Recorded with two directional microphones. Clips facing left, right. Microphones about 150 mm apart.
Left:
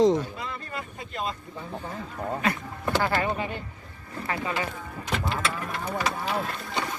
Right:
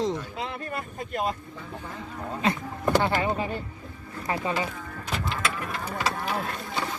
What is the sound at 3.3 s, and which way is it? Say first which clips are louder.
Speech: right 2 dB; 35° right (ahead or behind).